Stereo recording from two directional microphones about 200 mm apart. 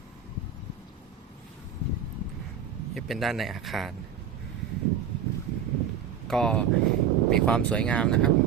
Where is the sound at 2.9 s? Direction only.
Centre (ahead or behind).